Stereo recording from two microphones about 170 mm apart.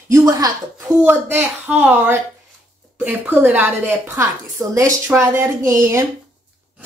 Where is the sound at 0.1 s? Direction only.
20° right (ahead or behind).